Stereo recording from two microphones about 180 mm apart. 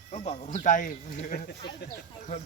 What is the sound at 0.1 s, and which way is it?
Speech, 40° left (ahead or behind).